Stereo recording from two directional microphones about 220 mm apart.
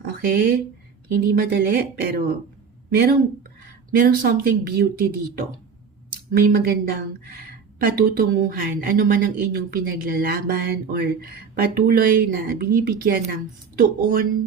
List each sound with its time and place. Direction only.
0.0 s a sound: 45° right (ahead or behind)
1.1 s speech: 45° right (ahead or behind)
6.4 s speech: 45° right (ahead or behind)